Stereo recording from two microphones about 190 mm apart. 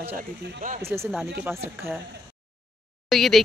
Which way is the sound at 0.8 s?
15° right (ahead or behind).